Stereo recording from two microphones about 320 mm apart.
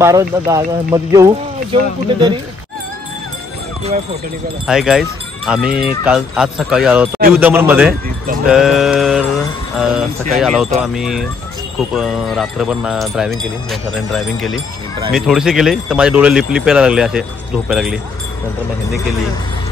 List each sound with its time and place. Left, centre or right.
0.0 s speech: centre
3.8 s speech: centre
4.6 s speech: centre
10.3 s speech: centre